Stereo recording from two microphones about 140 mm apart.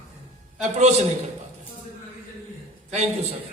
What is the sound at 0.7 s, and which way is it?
Speech, 55° right (ahead or behind).